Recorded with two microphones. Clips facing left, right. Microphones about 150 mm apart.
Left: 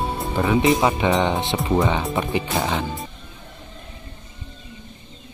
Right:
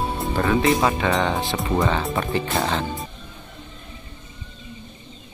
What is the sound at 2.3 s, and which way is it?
Speech, 15° left (ahead or behind).